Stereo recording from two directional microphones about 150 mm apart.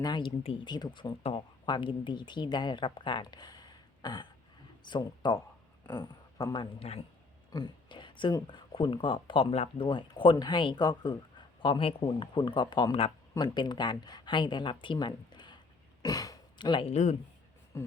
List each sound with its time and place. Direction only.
0.0 s speech: 30° left (ahead or behind)
6.7 s speech: 45° left (ahead or behind)
7.5 s speech: 30° left (ahead or behind)
16.0 s a sound: 25° left (ahead or behind)
16.9 s speech: 45° left (ahead or behind)
17.7 s speech: 20° left (ahead or behind)